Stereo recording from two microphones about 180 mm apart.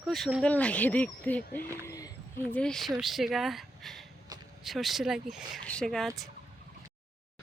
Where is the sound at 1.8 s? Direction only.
20° left (ahead or behind).